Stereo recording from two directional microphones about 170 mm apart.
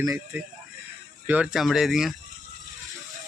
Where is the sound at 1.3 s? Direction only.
5° right (ahead or behind).